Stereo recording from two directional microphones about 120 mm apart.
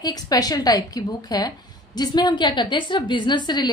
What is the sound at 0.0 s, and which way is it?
A woman's voice, 30° left (ahead or behind).